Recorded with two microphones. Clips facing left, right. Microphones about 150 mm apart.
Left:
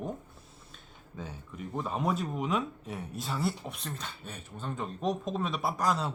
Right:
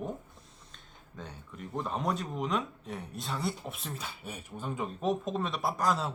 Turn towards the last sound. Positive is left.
turn(degrees=0)  # may be behind; listen again after turning